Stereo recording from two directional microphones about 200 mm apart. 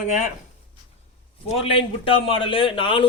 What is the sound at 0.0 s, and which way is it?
Speech, 40° left (ahead or behind).